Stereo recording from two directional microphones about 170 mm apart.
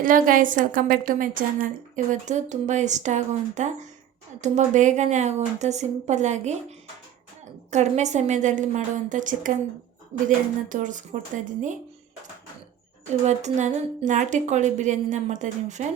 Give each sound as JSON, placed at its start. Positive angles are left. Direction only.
{"t": 0.0, "sound": "a woman's voice", "side_deg": -55}
{"t": 13.2, "sound": "a woman's voice", "side_deg": -45}